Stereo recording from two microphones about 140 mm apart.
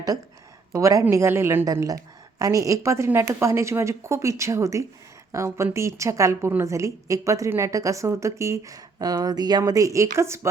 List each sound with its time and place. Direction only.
0.7 s a woman's voice: 20° right (ahead or behind)